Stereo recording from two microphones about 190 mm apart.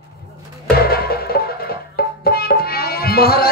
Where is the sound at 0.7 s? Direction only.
55° left (ahead or behind).